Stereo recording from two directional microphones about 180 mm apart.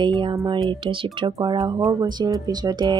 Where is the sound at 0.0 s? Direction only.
25° right (ahead or behind).